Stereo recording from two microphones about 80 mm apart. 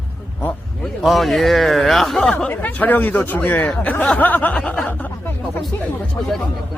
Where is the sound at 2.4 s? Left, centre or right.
Centre.